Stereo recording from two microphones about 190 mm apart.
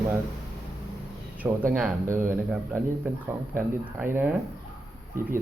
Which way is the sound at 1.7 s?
10° right (ahead or behind).